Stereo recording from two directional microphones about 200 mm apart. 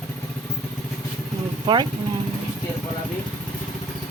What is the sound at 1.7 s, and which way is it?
Speech, 20° right (ahead or behind).